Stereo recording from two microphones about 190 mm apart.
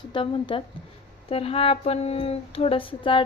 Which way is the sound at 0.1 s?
25° left (ahead or behind).